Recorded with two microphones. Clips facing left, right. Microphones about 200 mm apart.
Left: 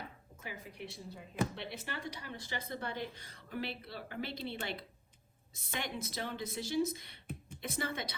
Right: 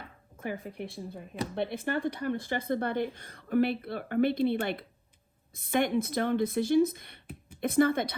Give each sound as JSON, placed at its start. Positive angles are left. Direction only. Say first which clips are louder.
{"t": 0.3, "sound": "speech", "louder": "right 11 dB", "side_deg": -55}